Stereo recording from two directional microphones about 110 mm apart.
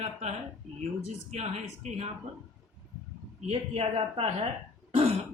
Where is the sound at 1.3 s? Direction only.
75° right (ahead or behind).